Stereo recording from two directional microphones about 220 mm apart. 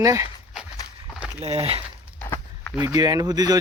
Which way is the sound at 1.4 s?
25° right (ahead or behind).